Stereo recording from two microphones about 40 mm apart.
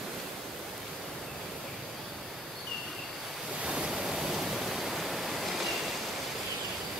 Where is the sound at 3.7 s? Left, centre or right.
Right.